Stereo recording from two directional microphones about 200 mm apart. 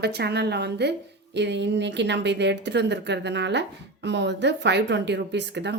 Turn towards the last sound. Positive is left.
turn(degrees=-60)  # may be behind; listen again after turning